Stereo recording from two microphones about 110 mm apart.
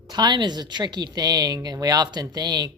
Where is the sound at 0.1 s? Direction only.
40° right (ahead or behind).